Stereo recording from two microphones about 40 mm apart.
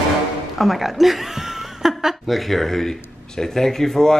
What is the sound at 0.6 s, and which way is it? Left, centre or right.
Speech, centre.